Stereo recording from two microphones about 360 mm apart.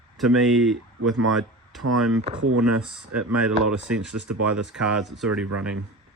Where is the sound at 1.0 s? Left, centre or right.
Right.